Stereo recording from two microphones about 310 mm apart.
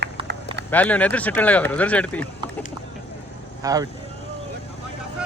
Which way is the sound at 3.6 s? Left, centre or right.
Centre.